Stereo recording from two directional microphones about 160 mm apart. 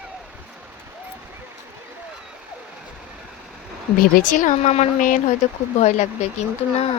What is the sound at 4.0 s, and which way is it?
Speech, 60° left (ahead or behind).